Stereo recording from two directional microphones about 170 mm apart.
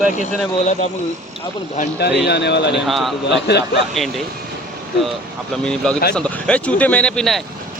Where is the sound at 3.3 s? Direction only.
80° left.